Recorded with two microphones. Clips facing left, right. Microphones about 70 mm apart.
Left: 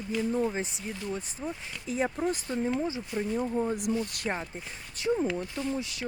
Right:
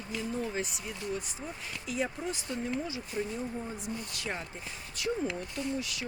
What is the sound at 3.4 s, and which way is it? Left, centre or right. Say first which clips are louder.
Speech: left 8 dB; left.